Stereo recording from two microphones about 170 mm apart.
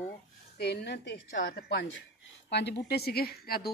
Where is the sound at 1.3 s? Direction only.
60° left (ahead or behind).